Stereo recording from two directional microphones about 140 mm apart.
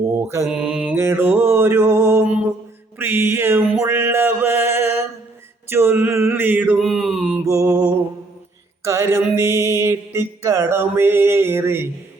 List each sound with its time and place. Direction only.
0.4 s mantra: 5° right (ahead or behind)
0.9 s a sound: 15° right (ahead or behind)
3.8 s mantra: 15° right (ahead or behind)
6.7 s mantra: centre (ahead or behind)
7.4 s music: 20° right (ahead or behind)
8.8 s mantra: 20° right (ahead or behind)